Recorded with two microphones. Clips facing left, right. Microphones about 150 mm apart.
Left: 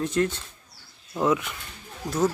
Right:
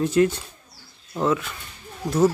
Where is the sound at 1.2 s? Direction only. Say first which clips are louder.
Right 1 dB; 15° left (ahead or behind).